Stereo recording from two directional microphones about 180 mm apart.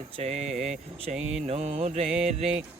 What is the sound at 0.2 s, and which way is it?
Speech, 35° right (ahead or behind).